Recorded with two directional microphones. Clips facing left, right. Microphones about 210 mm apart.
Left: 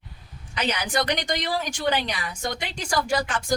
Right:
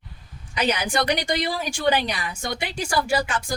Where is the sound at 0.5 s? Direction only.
10° right (ahead or behind).